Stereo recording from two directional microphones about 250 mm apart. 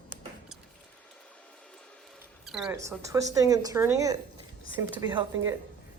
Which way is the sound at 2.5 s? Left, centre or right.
Centre.